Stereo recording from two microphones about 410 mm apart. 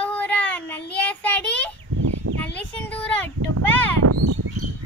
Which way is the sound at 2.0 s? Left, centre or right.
Right.